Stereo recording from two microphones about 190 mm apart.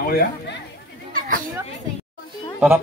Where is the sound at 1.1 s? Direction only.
45° right (ahead or behind).